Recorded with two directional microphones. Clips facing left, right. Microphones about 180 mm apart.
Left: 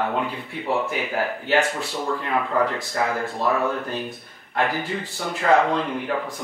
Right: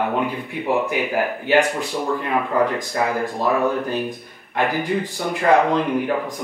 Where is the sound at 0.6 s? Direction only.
15° right (ahead or behind).